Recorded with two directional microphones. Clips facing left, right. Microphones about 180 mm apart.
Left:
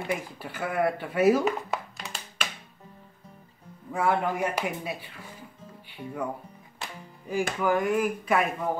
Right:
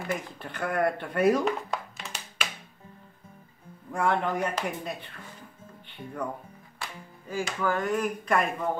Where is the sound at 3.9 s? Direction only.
5° left (ahead or behind).